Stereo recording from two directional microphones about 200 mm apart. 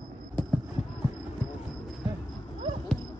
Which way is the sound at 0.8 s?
35° left (ahead or behind).